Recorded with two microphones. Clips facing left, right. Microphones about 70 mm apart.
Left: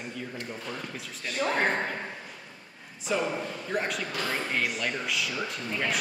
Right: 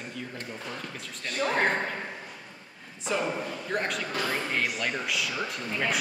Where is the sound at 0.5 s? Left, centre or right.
Centre.